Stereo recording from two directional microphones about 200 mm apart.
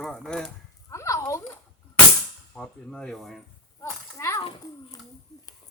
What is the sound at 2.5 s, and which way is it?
Speech, 5° left (ahead or behind).